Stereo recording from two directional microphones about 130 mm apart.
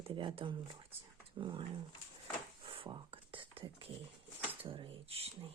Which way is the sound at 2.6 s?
40° right (ahead or behind).